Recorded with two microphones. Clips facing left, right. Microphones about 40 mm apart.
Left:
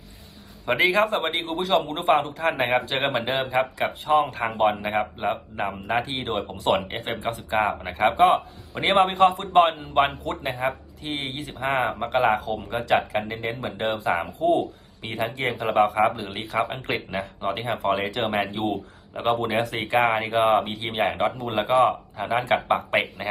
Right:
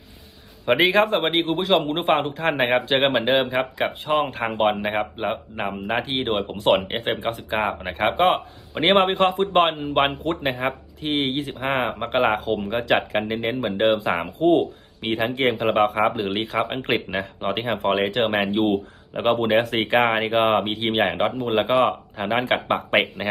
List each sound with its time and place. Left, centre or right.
0.6 s speech: right
4.6 s speech: right
5.8 s speech: right
7.6 s speech: centre
7.9 s speech: right
16.6 s speech: right